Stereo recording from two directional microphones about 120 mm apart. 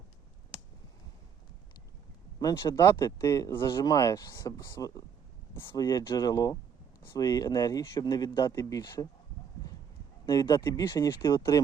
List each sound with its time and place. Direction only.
2.4 s speech: 30° left (ahead or behind)
8.2 s speech: 40° left (ahead or behind)
8.4 s speech: 25° left (ahead or behind)
8.8 s speech: 35° left (ahead or behind)
10.4 s speech: 40° left (ahead or behind)
10.8 s speech: 25° left (ahead or behind)